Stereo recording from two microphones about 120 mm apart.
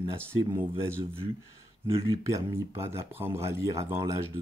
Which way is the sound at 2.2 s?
25° right (ahead or behind).